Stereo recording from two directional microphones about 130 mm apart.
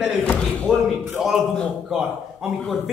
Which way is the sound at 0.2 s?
10° left (ahead or behind).